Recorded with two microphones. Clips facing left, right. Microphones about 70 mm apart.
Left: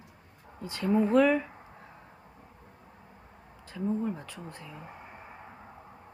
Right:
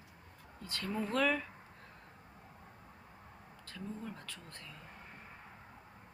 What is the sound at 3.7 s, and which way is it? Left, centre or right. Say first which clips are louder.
Speech: left 13 dB; centre.